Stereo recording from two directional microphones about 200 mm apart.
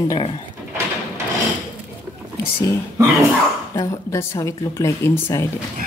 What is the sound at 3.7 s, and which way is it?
A woman's voice, 15° left (ahead or behind).